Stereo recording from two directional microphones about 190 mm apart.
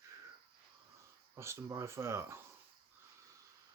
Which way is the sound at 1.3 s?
15° right (ahead or behind).